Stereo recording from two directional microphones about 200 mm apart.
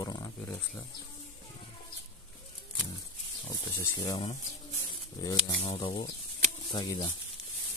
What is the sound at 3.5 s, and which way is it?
Speech, 15° left (ahead or behind).